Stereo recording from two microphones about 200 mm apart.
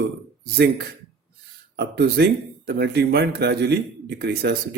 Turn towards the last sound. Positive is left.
turn(degrees=-50)  # may be behind; listen again after turning